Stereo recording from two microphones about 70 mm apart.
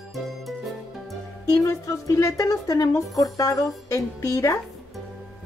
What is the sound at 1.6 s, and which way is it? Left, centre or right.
Speech, left.